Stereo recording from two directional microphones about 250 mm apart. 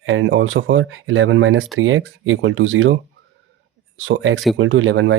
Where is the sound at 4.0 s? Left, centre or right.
Right.